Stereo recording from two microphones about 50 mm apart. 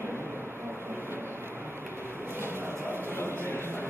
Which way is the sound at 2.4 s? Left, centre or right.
Right.